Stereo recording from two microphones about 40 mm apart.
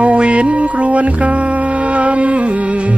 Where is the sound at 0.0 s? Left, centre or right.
Right.